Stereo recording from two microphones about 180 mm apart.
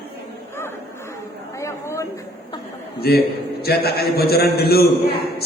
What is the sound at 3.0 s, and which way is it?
Speech, 60° left (ahead or behind).